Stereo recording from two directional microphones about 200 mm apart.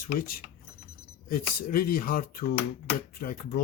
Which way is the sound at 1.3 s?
45° left (ahead or behind).